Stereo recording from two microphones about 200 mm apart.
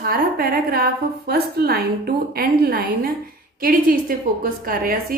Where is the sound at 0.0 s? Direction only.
50° right (ahead or behind).